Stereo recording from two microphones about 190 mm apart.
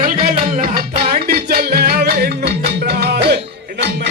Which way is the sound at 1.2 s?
55° right (ahead or behind).